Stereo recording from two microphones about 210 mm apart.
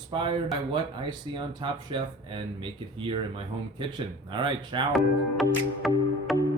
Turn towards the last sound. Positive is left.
turn(degrees=0)  # may be behind; listen again after turning